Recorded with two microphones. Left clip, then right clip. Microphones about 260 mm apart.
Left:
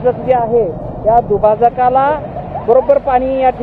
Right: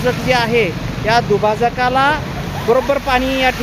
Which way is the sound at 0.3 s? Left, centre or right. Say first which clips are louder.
Left 1 dB; right.